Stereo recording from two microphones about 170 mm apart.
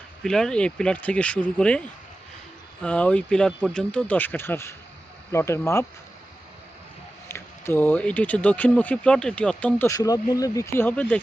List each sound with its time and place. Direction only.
0.2 s speech: 5° left (ahead or behind)
2.8 s speech: 5° left (ahead or behind)
7.3 s speech: 15° left (ahead or behind)